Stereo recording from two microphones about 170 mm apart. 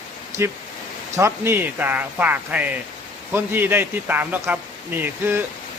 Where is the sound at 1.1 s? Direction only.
15° right (ahead or behind).